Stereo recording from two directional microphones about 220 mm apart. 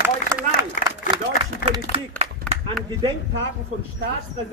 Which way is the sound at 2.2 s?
25° right (ahead or behind).